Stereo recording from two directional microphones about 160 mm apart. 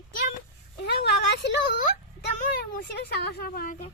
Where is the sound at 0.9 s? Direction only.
90° left.